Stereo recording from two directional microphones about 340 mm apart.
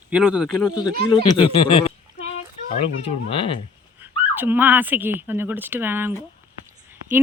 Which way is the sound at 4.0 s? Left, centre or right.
Centre.